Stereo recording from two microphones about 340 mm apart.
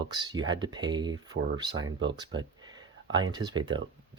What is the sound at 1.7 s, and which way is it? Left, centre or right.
Speech, right.